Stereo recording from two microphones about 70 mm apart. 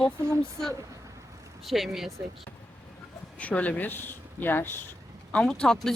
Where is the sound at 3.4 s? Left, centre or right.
Left.